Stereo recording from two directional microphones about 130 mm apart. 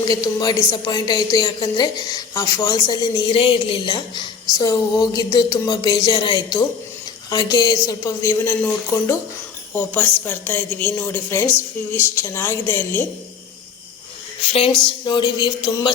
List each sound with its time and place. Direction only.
0.0 s a woman's voice: 30° left (ahead or behind)
14.5 s a woman's voice: 40° left (ahead or behind)